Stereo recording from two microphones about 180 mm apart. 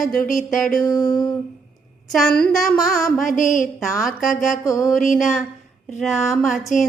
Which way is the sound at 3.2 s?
45° left (ahead or behind).